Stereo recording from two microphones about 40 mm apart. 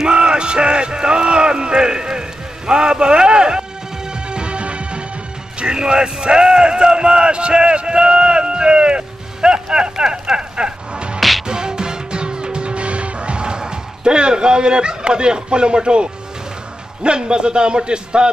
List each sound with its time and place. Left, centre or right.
0.0 s a sound: right
5.6 s speech: right
11.1 s music: centre
11.4 s music: centre
17.0 s a man's voice: right